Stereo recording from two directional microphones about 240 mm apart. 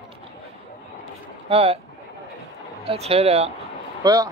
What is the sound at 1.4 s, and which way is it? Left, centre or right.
Speech, right.